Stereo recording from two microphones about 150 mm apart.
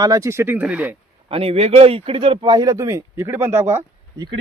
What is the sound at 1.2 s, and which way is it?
A man's voice, 40° right (ahead or behind).